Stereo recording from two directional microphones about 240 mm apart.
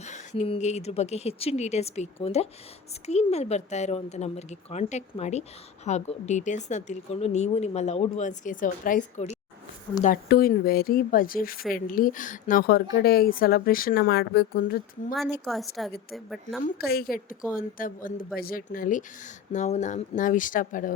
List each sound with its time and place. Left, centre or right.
0.0 s a woman's voice: left
15.4 s a woman's voice: centre
16.6 s speech: left